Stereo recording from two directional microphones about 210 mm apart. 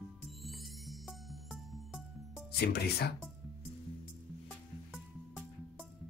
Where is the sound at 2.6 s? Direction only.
50° left (ahead or behind).